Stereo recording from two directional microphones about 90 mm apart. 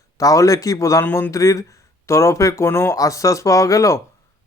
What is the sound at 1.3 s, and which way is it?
Speech, 35° left (ahead or behind).